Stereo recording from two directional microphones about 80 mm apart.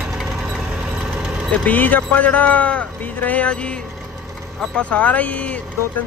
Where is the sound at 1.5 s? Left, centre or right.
Centre.